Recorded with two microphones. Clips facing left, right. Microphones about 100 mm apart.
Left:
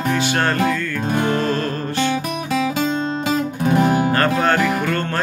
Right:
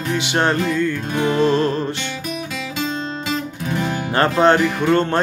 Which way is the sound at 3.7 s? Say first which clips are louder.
Left 7 dB; 45° left (ahead or behind).